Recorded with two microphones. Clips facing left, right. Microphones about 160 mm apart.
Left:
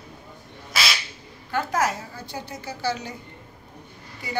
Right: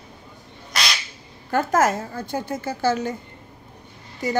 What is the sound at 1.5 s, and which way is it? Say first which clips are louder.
A woman's voice: right 5 dB; 45° right (ahead or behind).